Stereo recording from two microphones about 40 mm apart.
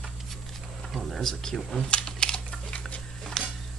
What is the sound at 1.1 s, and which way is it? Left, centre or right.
Speech, centre.